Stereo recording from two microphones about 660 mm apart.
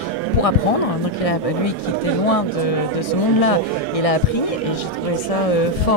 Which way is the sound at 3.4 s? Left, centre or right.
Left.